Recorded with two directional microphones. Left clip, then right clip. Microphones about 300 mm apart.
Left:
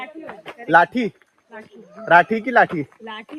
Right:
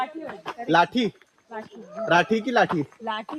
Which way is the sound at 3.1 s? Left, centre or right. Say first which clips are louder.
Right 4 dB; centre.